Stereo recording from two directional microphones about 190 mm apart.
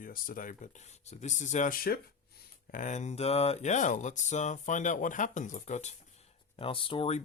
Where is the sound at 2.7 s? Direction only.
40° left (ahead or behind).